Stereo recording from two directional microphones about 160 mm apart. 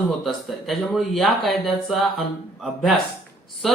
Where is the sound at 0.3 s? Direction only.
Centre (ahead or behind).